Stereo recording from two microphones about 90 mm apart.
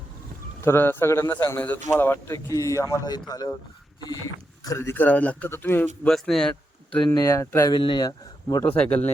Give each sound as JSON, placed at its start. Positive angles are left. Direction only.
{"t": 0.6, "sound": "a man's voice", "side_deg": 25}
{"t": 4.8, "sound": "a man's voice", "side_deg": 25}
{"t": 6.1, "sound": "speech", "side_deg": 5}
{"t": 7.0, "sound": "speech", "side_deg": 50}
{"t": 7.3, "sound": "speech", "side_deg": 35}
{"t": 7.7, "sound": "speech", "side_deg": 65}
{"t": 8.0, "sound": "speech", "side_deg": 45}
{"t": 8.6, "sound": "a man's voice", "side_deg": 15}